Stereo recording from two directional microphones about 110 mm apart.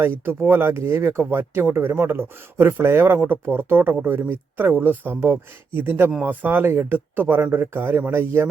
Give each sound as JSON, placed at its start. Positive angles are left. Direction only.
{"t": 0.3, "sound": "speech", "side_deg": -20}